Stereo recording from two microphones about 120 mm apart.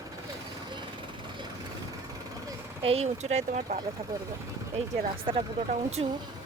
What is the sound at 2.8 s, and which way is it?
Speech, 55° right (ahead or behind).